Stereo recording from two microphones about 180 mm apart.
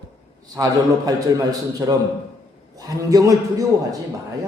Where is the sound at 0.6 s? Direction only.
20° right (ahead or behind).